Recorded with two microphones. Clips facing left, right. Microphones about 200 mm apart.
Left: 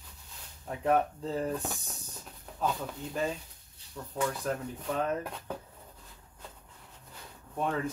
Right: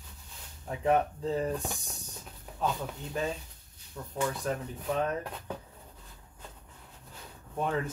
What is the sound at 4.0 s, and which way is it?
Speech, 5° left (ahead or behind).